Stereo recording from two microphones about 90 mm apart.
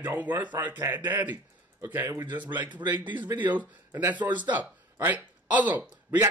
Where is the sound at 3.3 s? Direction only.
20° right (ahead or behind).